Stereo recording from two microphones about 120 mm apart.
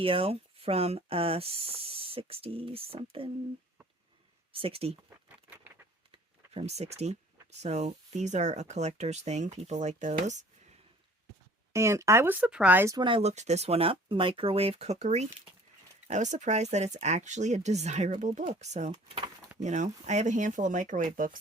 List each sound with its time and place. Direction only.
0.0 s speech: 50° right (ahead or behind)
4.5 s speech: 50° right (ahead or behind)
6.1 s a sound: 60° right (ahead or behind)
7.6 s speech: 70° right (ahead or behind)
11.7 s speech: 25° right (ahead or behind)
13.0 s speech: 45° right (ahead or behind)
13.2 s speech: 70° right (ahead or behind)
16.0 s speech: 80° right
19.0 s speech: 45° right (ahead or behind)
19.6 s speech: 80° right